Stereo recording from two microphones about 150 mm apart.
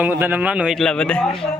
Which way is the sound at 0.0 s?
15° right (ahead or behind).